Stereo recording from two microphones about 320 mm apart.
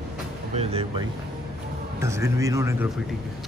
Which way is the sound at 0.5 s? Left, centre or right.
Centre.